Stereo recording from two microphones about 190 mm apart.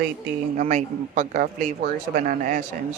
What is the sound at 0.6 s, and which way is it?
Speech, 40° right (ahead or behind).